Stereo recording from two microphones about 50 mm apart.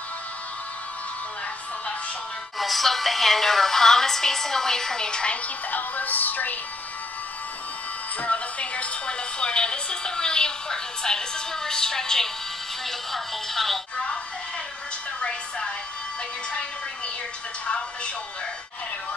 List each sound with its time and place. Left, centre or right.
2.6 s a woman's voice: centre
5.7 s speech: left
8.2 s speech: left; by 13.7 s centre
15.1 s a sound: centre
17.6 s music: left